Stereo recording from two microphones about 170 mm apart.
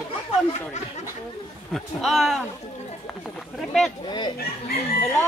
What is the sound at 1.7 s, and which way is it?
Speech, centre (ahead or behind).